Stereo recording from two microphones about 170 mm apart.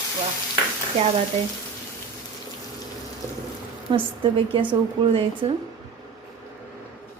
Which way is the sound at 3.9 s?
30° right (ahead or behind).